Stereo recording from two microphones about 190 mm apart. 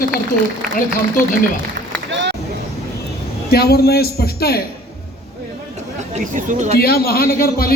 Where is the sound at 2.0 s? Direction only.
70° right (ahead or behind).